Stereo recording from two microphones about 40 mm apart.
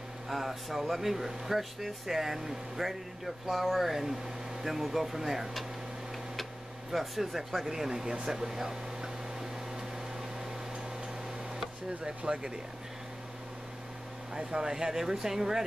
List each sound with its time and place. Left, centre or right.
0.3 s speech: centre
6.9 s speech: centre
12.3 s speech: right
14.3 s speech: centre